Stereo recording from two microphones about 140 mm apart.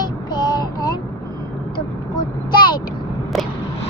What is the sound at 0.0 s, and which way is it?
Child singing, 30° left (ahead or behind).